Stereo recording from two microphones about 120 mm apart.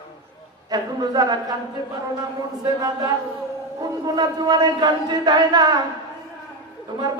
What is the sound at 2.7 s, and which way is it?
A man's voice, 35° right (ahead or behind).